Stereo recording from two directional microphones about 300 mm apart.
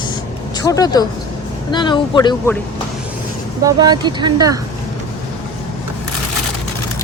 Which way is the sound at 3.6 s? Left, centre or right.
Centre.